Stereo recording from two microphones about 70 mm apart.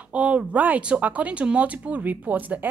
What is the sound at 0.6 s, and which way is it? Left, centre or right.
Speech, centre.